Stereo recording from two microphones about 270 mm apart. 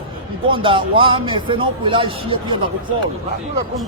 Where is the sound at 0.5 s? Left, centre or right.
Centre.